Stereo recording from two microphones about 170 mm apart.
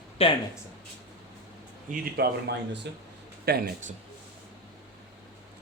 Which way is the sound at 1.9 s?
75° right (ahead or behind).